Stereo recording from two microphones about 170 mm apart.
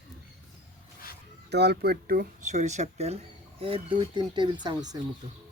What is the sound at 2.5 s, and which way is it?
Speech, 45° right (ahead or behind).